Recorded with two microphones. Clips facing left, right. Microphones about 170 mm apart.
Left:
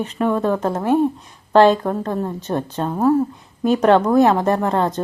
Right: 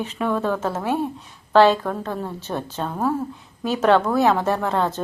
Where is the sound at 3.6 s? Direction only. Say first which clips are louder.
Left 4 dB; centre (ahead or behind).